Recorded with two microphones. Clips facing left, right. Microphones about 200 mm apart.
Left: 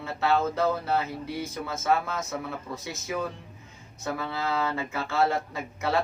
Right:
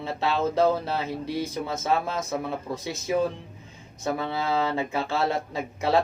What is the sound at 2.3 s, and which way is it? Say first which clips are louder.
Speech: right 4 dB; 20° right (ahead or behind).